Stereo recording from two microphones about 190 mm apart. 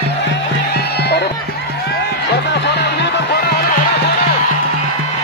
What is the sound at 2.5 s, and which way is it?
Music, 65° left (ahead or behind).